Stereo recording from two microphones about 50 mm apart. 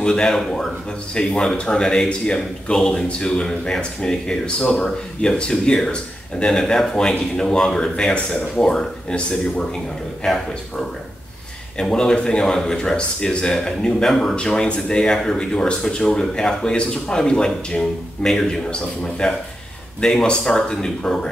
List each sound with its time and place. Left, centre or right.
0.0 s speech: centre
14.3 s speech: centre
18.7 s a man's voice: centre
20.0 s speech: centre